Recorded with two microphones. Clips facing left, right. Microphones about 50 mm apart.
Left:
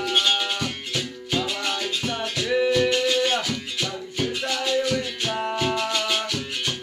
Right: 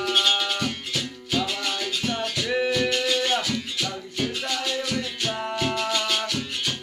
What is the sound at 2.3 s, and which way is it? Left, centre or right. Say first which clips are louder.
Music: left 5 dB; centre.